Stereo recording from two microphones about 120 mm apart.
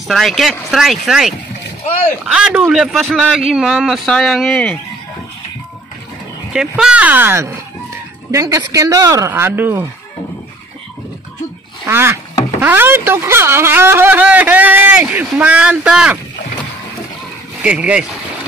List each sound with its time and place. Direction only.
0.1 s a man's voice: centre (ahead or behind)
6.5 s speech: 5° right (ahead or behind)
11.9 s speech: 20° right (ahead or behind)
17.6 s speech: 10° right (ahead or behind)